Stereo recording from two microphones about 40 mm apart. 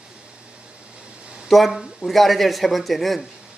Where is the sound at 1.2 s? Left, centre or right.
Right.